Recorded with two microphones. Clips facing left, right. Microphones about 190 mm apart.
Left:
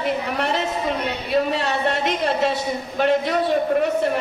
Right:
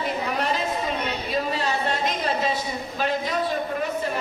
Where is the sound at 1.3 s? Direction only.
65° left (ahead or behind).